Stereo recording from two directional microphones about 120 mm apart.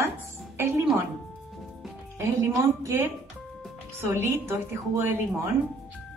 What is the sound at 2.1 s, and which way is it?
A woman's voice, 20° right (ahead or behind).